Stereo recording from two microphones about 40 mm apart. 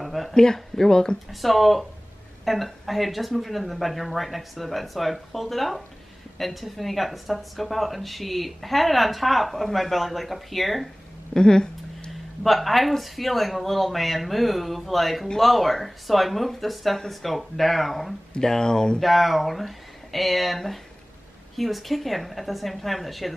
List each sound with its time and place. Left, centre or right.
0.0 s a sound: centre
0.3 s speech: centre
1.3 s speech: centre
11.3 s speech: centre
12.1 s speech: centre
18.4 s speech: centre
18.9 s speech: centre